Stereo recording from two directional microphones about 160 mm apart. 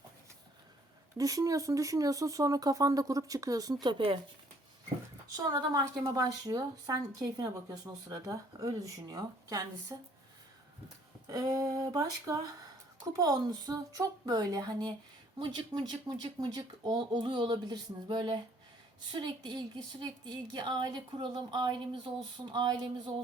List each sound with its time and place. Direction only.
1.1 s a woman's voice: 20° right (ahead or behind)
5.5 s a woman's voice: 20° right (ahead or behind)
11.3 s a woman's voice: 25° right (ahead or behind)